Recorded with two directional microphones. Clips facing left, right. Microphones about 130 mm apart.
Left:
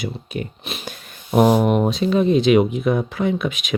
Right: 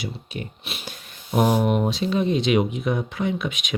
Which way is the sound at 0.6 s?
40° left (ahead or behind).